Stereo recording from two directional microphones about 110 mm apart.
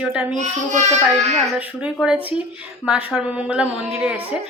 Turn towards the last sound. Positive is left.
turn(degrees=-10)  # may be behind; listen again after turning